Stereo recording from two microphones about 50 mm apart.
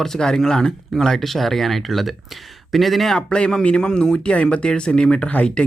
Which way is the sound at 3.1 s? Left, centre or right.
Centre.